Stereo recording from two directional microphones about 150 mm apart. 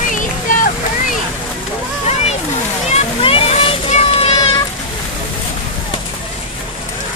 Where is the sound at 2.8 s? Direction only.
45° left (ahead or behind).